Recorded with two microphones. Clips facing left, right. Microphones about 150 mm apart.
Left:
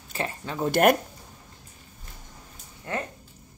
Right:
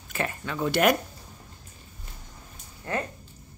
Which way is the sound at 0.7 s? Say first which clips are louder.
Left 3 dB; 50° left (ahead or behind).